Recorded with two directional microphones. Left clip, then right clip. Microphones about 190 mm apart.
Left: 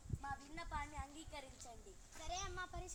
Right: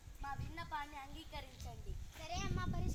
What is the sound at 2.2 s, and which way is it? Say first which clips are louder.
Speech: right 2 dB; 5° right (ahead or behind).